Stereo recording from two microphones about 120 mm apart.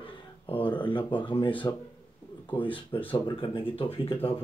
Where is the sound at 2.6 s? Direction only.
45° left (ahead or behind).